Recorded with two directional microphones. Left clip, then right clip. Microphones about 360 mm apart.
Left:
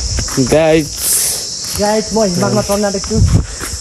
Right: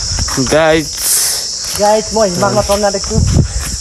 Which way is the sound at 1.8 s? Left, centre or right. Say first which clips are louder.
Right 3 dB; right.